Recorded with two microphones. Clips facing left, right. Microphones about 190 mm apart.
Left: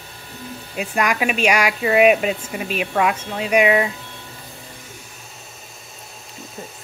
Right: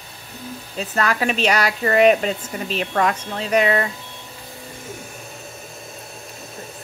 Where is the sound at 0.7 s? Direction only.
10° left (ahead or behind).